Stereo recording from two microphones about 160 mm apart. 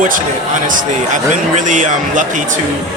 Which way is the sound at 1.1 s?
50° right (ahead or behind).